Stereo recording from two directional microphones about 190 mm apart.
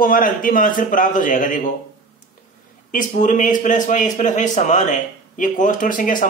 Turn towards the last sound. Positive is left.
turn(degrees=45)  # may be behind; listen again after turning